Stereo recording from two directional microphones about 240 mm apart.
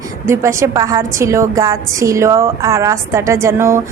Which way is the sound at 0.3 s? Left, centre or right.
Centre.